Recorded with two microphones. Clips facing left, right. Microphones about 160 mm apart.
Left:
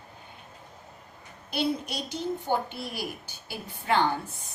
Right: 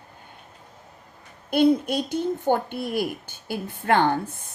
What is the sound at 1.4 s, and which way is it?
A woman's voice, 50° right (ahead or behind).